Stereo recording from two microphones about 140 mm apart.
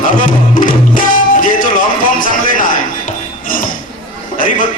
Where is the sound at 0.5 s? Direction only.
75° left (ahead or behind).